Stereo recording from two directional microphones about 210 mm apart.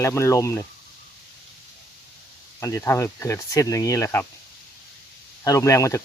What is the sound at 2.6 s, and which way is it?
Speech, 15° left (ahead or behind).